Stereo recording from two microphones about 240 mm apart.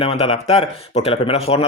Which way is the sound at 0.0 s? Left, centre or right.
Left.